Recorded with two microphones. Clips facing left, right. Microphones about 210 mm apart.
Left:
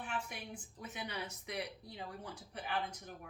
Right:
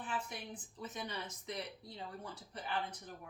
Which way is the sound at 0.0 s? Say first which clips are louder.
Right 1 dB; 10° left (ahead or behind).